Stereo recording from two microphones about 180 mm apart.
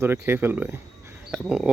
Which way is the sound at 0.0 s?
15° right (ahead or behind).